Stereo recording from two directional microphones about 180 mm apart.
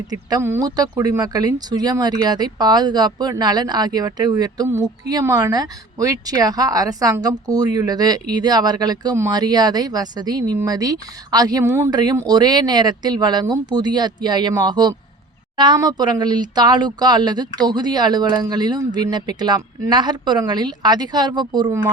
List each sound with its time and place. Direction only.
0.1 s speech: 20° right (ahead or behind)